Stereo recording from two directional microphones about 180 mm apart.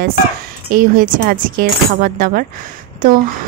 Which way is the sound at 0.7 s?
50° right (ahead or behind).